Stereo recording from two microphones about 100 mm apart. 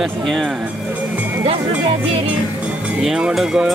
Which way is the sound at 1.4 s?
65° right (ahead or behind).